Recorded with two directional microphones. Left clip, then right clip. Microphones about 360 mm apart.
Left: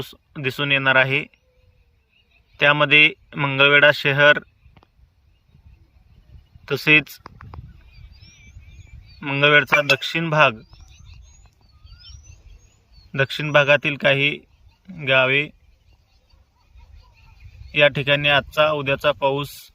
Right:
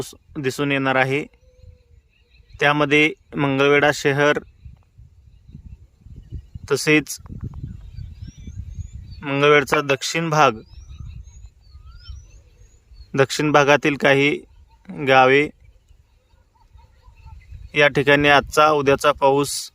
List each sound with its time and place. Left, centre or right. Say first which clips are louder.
0.0 s speech: right 1 dB; centre
2.6 s speech: left 2 dB; centre
6.7 s speech: left 2 dB; centre
9.2 s speech: even; centre
10.8 s a sound: right 2 dB; centre
13.1 s speech: right 4 dB; centre
17.7 s speech: right 1 dB; centre